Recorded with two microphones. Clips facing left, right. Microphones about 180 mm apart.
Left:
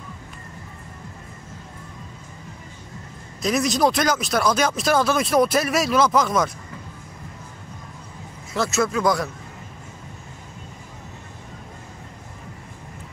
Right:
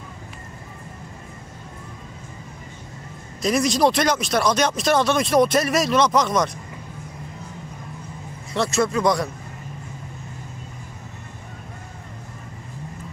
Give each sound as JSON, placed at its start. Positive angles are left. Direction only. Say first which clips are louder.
{"t": 3.4, "sound": "speech", "louder": "right 1 dB", "side_deg": 0}
{"t": 8.5, "sound": "speech", "louder": "right 1 dB", "side_deg": 0}